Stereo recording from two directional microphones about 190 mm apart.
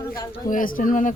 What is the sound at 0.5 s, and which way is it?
Speech, 45° left (ahead or behind).